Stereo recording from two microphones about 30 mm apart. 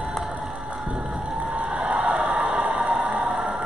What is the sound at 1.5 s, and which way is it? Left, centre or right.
Crowd, right.